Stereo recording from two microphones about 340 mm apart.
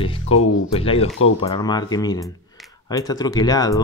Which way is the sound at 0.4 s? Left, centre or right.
Left.